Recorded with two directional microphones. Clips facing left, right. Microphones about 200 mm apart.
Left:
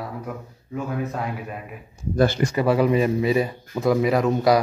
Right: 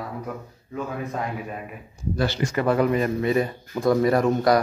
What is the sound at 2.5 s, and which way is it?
Speech, 10° left (ahead or behind).